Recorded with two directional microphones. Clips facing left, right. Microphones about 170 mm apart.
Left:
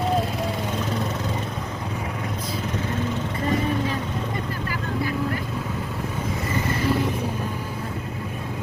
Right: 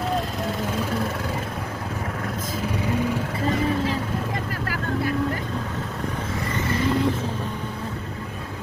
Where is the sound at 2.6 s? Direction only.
10° right (ahead or behind).